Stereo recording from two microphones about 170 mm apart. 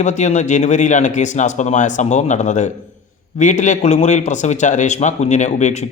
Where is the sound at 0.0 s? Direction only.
45° left (ahead or behind).